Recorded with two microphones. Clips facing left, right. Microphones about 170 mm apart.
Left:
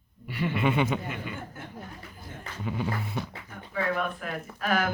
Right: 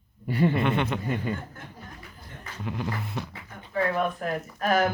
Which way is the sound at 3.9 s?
40° right (ahead or behind).